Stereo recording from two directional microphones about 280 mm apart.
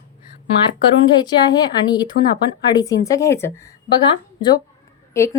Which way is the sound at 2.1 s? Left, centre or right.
Left.